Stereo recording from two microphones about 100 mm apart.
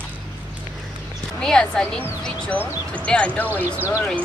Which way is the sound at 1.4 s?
5° left (ahead or behind).